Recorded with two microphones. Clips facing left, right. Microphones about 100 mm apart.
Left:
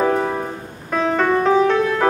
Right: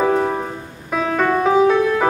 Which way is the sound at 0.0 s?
Centre (ahead or behind).